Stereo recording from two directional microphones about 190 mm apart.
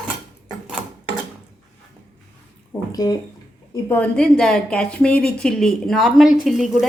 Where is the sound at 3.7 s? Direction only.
10° left (ahead or behind).